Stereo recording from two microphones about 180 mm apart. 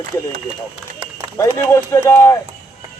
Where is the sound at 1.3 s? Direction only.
15° left (ahead or behind).